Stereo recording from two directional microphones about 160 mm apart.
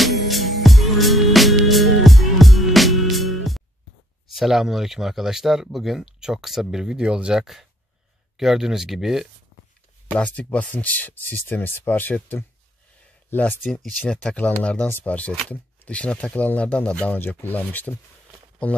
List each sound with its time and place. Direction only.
0.0 s music: centre (ahead or behind)
4.3 s speech: centre (ahead or behind)